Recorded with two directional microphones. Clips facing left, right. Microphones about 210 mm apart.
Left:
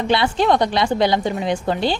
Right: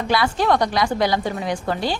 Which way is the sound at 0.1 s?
25° left (ahead or behind).